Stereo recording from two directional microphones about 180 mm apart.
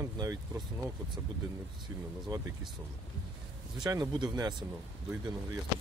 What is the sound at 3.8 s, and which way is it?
Speech, 25° right (ahead or behind).